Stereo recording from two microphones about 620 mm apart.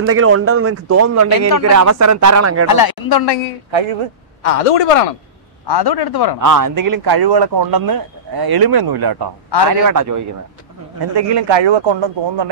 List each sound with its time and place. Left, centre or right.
0.0 s speech: right
2.7 s speech: left
3.7 s speech: right
4.4 s speech: left
5.7 s speech: left
6.4 s speech: right
11.1 s speech: right